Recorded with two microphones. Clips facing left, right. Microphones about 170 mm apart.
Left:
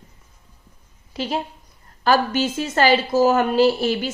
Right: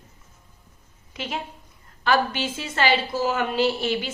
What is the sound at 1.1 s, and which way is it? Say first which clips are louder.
A woman's voice: left 6 dB; 35° left (ahead or behind).